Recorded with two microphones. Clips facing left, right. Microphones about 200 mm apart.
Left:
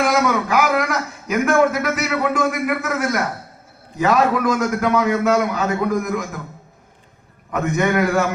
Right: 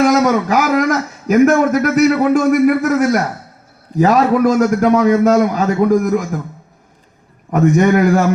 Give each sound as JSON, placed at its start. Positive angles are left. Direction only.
{"t": 0.0, "sound": "a man's voice", "side_deg": -40}
{"t": 7.5, "sound": "a man's voice", "side_deg": -35}